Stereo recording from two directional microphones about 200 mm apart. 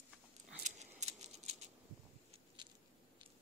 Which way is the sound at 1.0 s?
30° right (ahead or behind).